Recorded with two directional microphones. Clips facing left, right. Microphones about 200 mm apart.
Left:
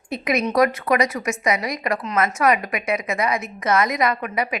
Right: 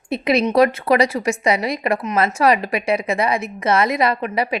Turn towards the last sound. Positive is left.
turn(degrees=-30)  # may be behind; listen again after turning